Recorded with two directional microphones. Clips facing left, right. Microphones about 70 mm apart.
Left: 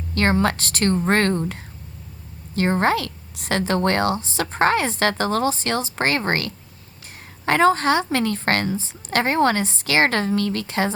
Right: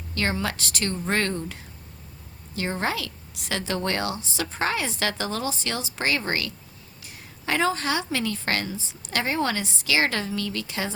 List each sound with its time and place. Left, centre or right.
0.1 s a woman's voice: left